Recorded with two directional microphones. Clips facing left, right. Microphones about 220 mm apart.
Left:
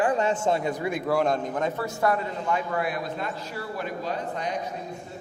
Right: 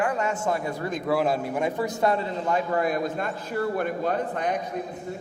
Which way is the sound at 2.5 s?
40° right (ahead or behind).